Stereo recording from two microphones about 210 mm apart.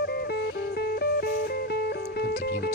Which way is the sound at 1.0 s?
50° left (ahead or behind).